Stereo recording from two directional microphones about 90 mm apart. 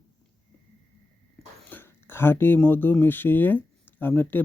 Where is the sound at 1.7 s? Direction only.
25° left (ahead or behind).